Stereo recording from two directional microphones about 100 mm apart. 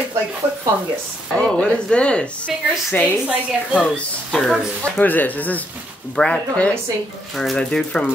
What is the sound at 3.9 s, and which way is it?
Speech, 10° left (ahead or behind).